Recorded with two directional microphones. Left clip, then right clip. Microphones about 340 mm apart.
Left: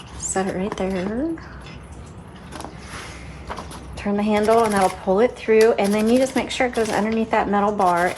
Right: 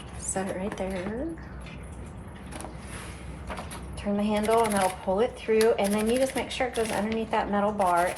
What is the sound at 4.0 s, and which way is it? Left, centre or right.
Speech, left.